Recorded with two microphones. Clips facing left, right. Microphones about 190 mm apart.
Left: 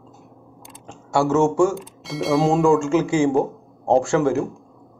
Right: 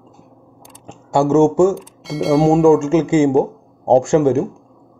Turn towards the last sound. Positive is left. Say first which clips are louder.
# right 5 dB
turn(degrees=-20)  # may be behind; listen again after turning